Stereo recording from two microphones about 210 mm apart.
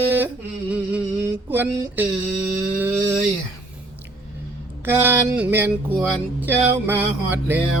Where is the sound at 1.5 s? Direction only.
10° right (ahead or behind).